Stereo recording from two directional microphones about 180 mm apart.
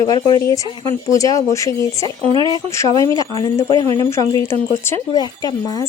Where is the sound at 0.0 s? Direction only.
20° left (ahead or behind).